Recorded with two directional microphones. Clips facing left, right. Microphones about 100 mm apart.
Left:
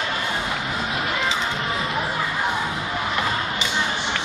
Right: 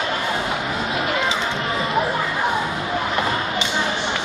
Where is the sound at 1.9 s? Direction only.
30° right (ahead or behind).